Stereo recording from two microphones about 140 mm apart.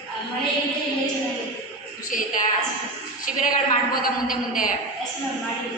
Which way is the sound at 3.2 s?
80° left.